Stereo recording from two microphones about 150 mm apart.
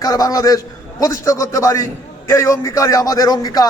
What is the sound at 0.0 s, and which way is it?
A man's voice, 25° left (ahead or behind).